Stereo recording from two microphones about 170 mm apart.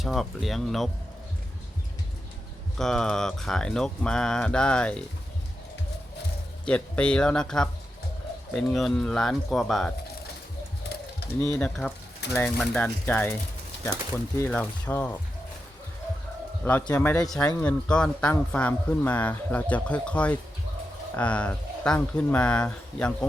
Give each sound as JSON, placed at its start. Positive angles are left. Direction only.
{"t": 0.0, "sound": "speech", "side_deg": 0}
{"t": 2.7, "sound": "speech", "side_deg": 0}
{"t": 6.7, "sound": "speech", "side_deg": 5}
{"t": 11.3, "sound": "speech", "side_deg": 20}
{"t": 11.6, "sound": "speech", "side_deg": 5}
{"t": 16.9, "sound": "speech", "side_deg": 10}